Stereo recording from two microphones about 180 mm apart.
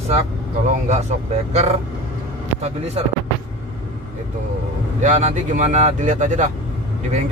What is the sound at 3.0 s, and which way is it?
Speech, 35° right (ahead or behind).